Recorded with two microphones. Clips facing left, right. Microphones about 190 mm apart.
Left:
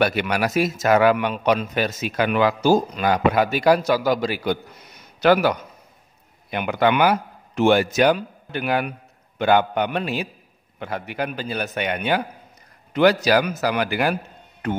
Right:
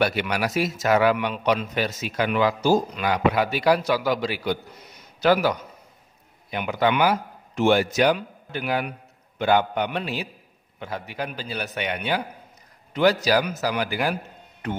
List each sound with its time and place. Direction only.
0.0 s a man's voice: 55° left (ahead or behind)
3.0 s a man's voice: 45° left (ahead or behind)
5.2 s a man's voice: 60° left (ahead or behind)